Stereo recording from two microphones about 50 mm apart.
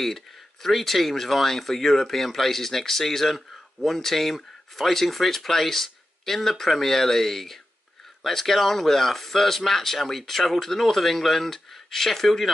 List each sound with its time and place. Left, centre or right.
0.0 s speech: centre